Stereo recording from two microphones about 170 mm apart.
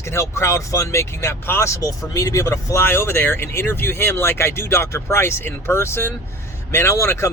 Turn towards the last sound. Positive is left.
turn(degrees=15)  # may be behind; listen again after turning